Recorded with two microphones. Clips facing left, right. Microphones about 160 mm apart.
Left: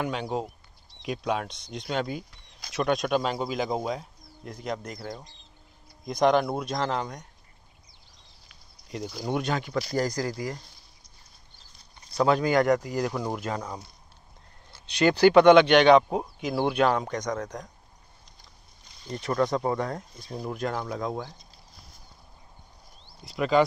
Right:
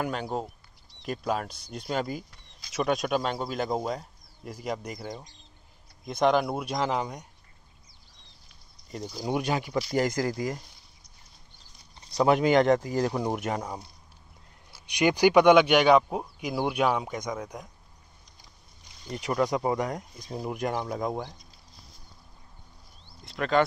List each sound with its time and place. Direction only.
0.0 s speech: centre (ahead or behind)
8.8 s speech: 5° left (ahead or behind)
9.2 s speech: 10° right (ahead or behind)
9.9 s speech: 25° right (ahead or behind)
12.2 s speech: 20° right (ahead or behind)
16.0 s speech: 5° left (ahead or behind)
16.3 s speech: 10° right (ahead or behind)
19.0 s speech: 10° right (ahead or behind)
23.2 s speech: 5° left (ahead or behind)